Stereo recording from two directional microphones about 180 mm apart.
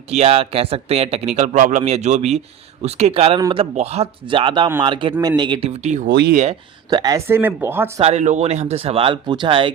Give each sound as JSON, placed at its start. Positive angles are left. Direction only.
{"t": 0.1, "sound": "speech", "side_deg": -35}
{"t": 6.1, "sound": "speech", "side_deg": -60}
{"t": 6.3, "sound": "speech", "side_deg": -40}
{"t": 6.9, "sound": "speech", "side_deg": -20}
{"t": 8.0, "sound": "speech", "side_deg": -40}